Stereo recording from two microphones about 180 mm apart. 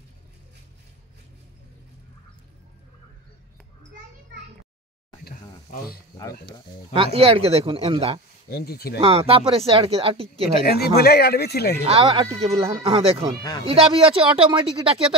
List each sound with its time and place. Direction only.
6.9 s speech: 30° right (ahead or behind)
8.5 s speech: 60° left (ahead or behind)
9.0 s speech: 30° right (ahead or behind)
10.6 s speech: 60° left (ahead or behind)
11.8 s speech: 30° right (ahead or behind)